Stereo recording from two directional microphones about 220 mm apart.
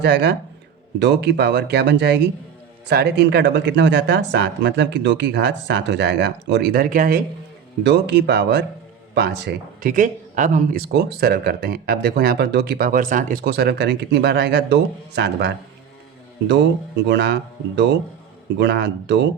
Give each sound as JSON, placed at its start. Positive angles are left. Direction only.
{"t": 0.0, "sound": "speech", "side_deg": -50}
{"t": 17.1, "sound": "speech", "side_deg": -50}